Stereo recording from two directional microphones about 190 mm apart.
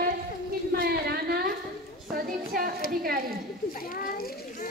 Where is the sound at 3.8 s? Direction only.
50° left (ahead or behind).